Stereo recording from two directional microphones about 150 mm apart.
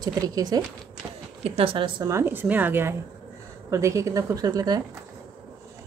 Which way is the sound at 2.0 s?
15° right (ahead or behind).